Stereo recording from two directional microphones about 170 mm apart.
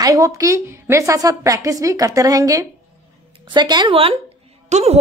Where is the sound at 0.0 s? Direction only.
20° right (ahead or behind).